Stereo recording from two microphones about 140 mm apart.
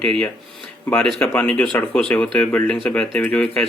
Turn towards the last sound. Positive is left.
turn(degrees=5)  # may be behind; listen again after turning